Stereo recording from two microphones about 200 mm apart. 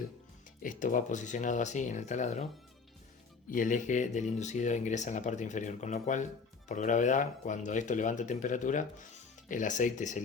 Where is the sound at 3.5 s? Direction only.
40° left (ahead or behind).